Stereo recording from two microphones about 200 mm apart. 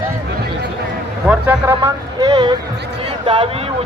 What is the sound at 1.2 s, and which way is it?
Speech, 10° right (ahead or behind).